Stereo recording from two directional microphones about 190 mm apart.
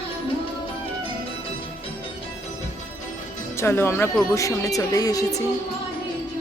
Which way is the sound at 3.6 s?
15° left (ahead or behind).